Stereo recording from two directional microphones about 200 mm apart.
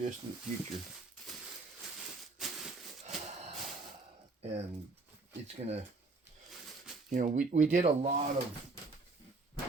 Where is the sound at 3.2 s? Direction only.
35° right (ahead or behind).